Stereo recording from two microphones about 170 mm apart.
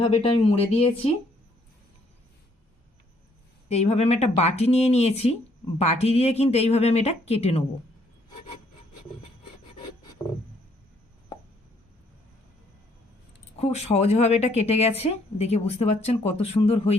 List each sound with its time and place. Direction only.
0.0 s a woman's voice: 35° left (ahead or behind)
3.7 s a woman's voice: 40° left (ahead or behind)
13.6 s a woman's voice: 40° left (ahead or behind)